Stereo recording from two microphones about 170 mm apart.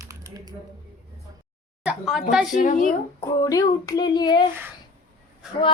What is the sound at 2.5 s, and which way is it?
Speech, 50° left (ahead or behind).